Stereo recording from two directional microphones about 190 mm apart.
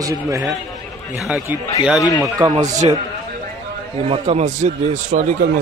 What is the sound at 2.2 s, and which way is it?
Speech, 15° right (ahead or behind).